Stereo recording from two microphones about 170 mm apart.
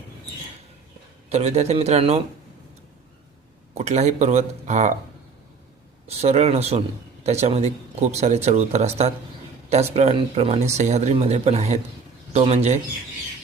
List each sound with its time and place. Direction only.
1.3 s speech: 40° right (ahead or behind)
3.8 s speech: 40° right (ahead or behind)
6.1 s speech: 40° right (ahead or behind)